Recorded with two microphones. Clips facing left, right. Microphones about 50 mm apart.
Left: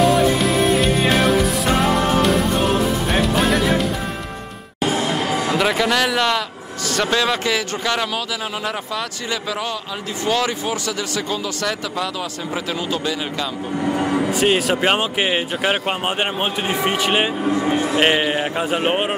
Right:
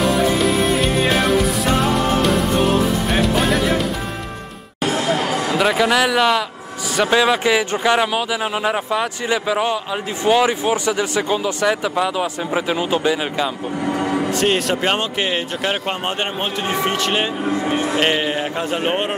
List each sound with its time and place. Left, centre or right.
0.0 s music: centre
5.6 s speech: centre; by 13.5 s right
13.9 s speech: centre
17.5 s speech: centre
17.9 s speech: centre